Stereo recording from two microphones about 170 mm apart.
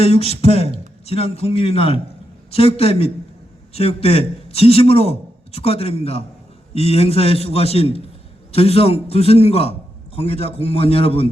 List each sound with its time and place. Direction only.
0.0 s a man's voice: 35° left (ahead or behind)